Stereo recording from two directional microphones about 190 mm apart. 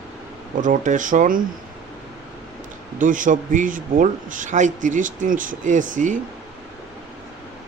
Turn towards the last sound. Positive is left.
turn(degrees=-40)  # may be behind; listen again after turning